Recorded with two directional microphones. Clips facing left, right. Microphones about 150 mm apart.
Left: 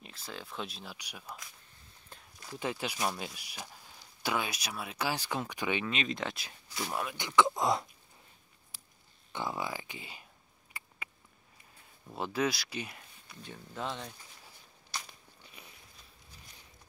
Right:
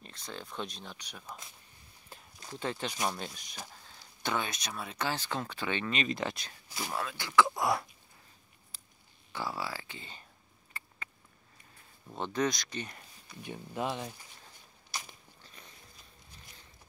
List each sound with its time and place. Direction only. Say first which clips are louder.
0.0 s speech: right 1 dB; 5° left (ahead or behind)
2.1 s a sound: right 2 dB; 5° right (ahead or behind)
2.5 s speech: even; 10° left (ahead or behind)
5.9 s speech: right 2 dB; centre (ahead or behind)
6.9 s speech: even; 15° left (ahead or behind)
9.3 s speech: left 1 dB; 20° left (ahead or behind)
10.8 s patter: right 1 dB; 10° left (ahead or behind)
12.1 s speech: even; 5° left (ahead or behind)
13.3 s speech: right 5 dB; 15° right (ahead or behind)
14.9 s a sound: even; 15° right (ahead or behind)
15.4 s a sound: left 1 dB; 10° left (ahead or behind)